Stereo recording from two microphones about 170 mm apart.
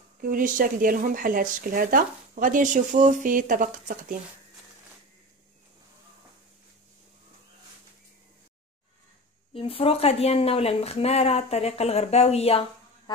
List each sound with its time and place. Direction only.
0.2 s speech: 55° right (ahead or behind)
9.5 s speech: 35° left (ahead or behind)